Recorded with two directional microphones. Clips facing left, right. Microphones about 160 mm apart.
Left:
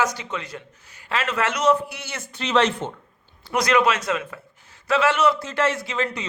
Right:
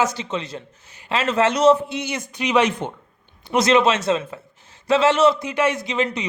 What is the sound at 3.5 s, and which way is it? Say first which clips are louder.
Speech: right 3 dB; 25° right (ahead or behind).